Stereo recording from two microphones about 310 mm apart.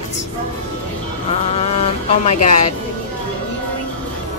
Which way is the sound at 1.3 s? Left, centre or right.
Centre.